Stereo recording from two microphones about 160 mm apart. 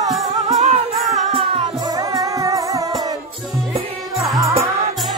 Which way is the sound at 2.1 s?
20° right (ahead or behind).